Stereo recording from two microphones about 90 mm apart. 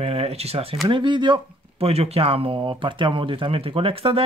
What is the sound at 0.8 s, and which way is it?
Speech, 60° right (ahead or behind).